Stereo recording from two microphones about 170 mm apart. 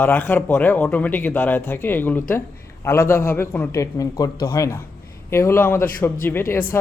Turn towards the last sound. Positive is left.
turn(degrees=15)  # may be behind; listen again after turning